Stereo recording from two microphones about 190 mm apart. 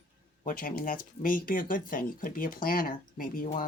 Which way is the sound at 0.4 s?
45° left (ahead or behind).